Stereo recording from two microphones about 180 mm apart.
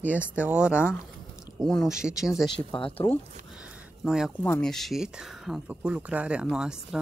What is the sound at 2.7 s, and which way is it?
Speech, 30° left (ahead or behind).